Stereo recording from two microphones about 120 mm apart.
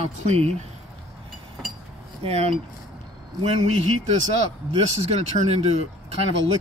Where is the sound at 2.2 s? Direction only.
55° right (ahead or behind).